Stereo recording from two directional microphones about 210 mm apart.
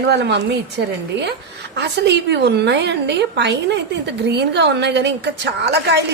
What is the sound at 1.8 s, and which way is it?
A woman's voice, 55° right (ahead or behind).